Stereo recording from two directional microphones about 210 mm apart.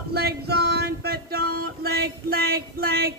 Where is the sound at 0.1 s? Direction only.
50° right (ahead or behind).